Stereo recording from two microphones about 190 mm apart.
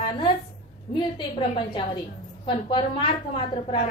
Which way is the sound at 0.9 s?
25° left (ahead or behind).